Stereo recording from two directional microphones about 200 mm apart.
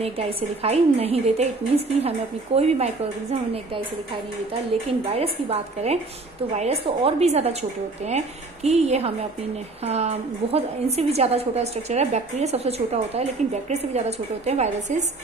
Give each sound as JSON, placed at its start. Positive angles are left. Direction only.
{"t": 0.0, "sound": "a woman's voice", "side_deg": -30}
{"t": 5.0, "sound": "a woman's voice", "side_deg": -30}
{"t": 8.6, "sound": "a woman's voice", "side_deg": -35}